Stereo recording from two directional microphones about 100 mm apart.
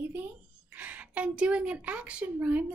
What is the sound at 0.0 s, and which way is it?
A woman's voice, 20° right (ahead or behind).